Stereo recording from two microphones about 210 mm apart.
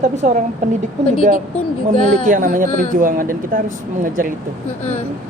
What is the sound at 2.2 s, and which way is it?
Speech, 40° right (ahead or behind).